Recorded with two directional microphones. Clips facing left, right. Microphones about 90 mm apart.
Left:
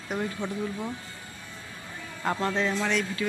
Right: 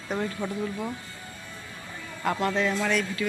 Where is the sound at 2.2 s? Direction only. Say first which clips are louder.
Right 1 dB; 25° left (ahead or behind).